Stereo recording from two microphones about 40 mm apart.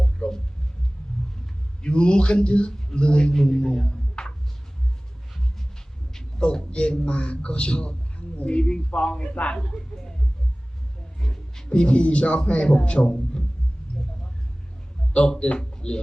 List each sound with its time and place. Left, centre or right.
0.2 s a sound: left
1.8 s a man's voice: left
6.4 s a man's voice: left
9.6 s speech: centre
11.2 s a man's voice: centre
15.1 s a man's voice: left